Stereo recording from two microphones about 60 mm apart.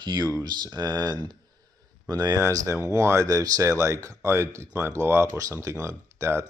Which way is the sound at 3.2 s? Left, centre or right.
Right.